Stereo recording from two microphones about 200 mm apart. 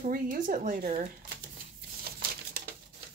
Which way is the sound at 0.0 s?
40° right (ahead or behind).